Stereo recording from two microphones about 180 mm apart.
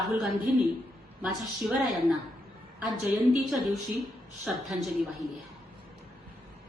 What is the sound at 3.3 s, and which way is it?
A woman's voice, centre (ahead or behind).